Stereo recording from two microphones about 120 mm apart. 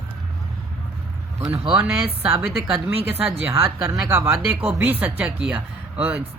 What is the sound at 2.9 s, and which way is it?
Speech, 55° right (ahead or behind).